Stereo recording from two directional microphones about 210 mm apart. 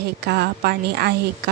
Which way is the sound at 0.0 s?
50° right (ahead or behind).